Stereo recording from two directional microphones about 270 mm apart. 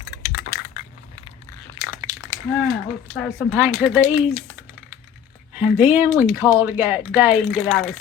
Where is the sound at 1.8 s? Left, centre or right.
Centre.